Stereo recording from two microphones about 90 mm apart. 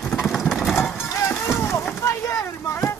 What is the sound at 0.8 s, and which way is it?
Music, 25° left (ahead or behind).